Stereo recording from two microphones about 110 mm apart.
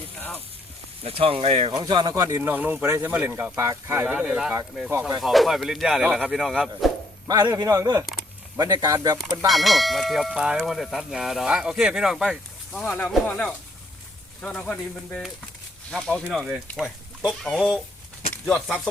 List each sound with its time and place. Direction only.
0.2 s sizzle: 20° left (ahead or behind)
1.0 s speech: 60° right (ahead or behind)
1.7 s a man's voice: 40° right (ahead or behind)
2.1 s speech: 30° right (ahead or behind)
2.8 s speech: 25° right (ahead or behind)
3.1 s speech: 15° right (ahead or behind)
4.9 s speech: 25° right (ahead or behind)
5.2 s speech: centre (ahead or behind)
7.3 s a man's voice: 35° right (ahead or behind)
9.5 s speech: centre (ahead or behind)
12.8 s speech: 15° left (ahead or behind)
16.2 s speech: 10° right (ahead or behind); by 17.7 s 5° left (ahead or behind)